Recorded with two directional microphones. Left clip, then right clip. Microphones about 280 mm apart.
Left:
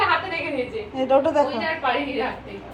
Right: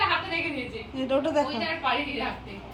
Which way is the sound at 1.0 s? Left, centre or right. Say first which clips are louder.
Left 7 dB; right.